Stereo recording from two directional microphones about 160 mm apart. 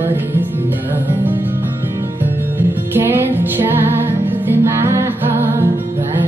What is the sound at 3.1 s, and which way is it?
Music, 15° right (ahead or behind).